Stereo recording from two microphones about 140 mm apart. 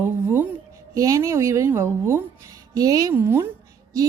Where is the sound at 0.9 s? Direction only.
20° right (ahead or behind).